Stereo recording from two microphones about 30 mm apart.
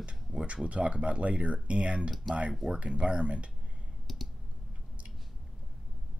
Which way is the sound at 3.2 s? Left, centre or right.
Right.